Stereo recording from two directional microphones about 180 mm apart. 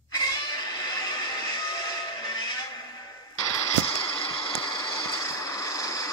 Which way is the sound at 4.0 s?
25° left (ahead or behind).